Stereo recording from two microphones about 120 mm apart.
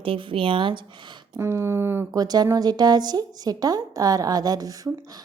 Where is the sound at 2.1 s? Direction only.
35° right (ahead or behind).